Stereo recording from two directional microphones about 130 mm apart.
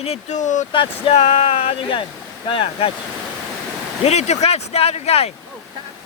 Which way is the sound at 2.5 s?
45° left (ahead or behind).